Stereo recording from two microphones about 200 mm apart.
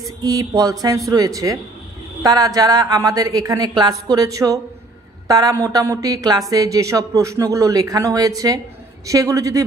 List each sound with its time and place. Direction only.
0.2 s a woman's voice: 20° right (ahead or behind)